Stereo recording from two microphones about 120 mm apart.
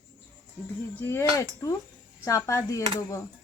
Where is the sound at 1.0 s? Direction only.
20° left (ahead or behind).